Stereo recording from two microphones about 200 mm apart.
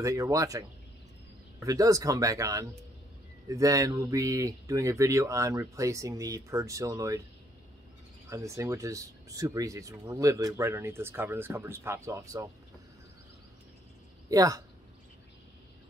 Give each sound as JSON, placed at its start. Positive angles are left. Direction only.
{"t": 0.0, "sound": "speech", "side_deg": -15}
{"t": 8.3, "sound": "speech", "side_deg": -15}
{"t": 14.3, "sound": "speech", "side_deg": -15}